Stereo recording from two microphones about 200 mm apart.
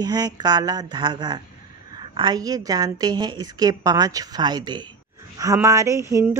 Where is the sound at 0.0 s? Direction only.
20° right (ahead or behind).